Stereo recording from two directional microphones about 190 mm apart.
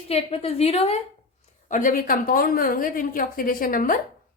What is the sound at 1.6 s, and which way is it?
A woman's voice, 45° left (ahead or behind).